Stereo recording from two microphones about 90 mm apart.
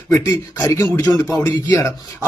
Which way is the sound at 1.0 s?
40° left (ahead or behind).